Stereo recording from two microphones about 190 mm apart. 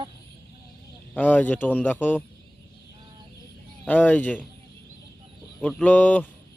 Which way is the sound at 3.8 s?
10° left (ahead or behind).